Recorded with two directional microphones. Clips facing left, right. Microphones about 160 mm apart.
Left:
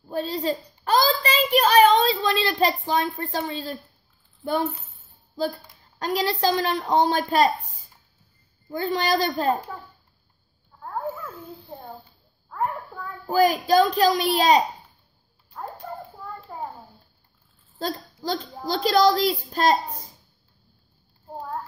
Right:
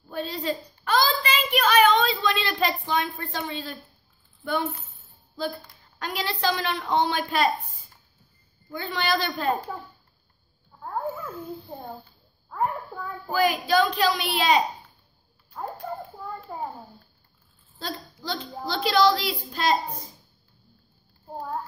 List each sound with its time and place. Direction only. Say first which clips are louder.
0.1 s a child's voice: left 3 dB; 35° left (ahead or behind)
5.9 s a child's voice: left 6 dB; 35° left (ahead or behind)
8.7 s a child's voice: left 4 dB; 40° left (ahead or behind)
10.8 s babbling: even; 5° right (ahead or behind)
12.4 s a sound: even; 5° right (ahead or behind)
13.3 s a child's voice: left 4 dB; 40° left (ahead or behind)
16.5 s a sound: even; 5° right (ahead or behind)
17.7 s a child's voice: left 5 dB; 45° left (ahead or behind)